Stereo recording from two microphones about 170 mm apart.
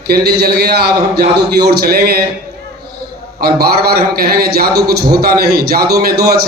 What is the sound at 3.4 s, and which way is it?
A man's voice, 65° right (ahead or behind).